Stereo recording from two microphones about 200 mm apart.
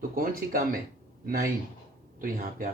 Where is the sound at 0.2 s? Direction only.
45° right (ahead or behind).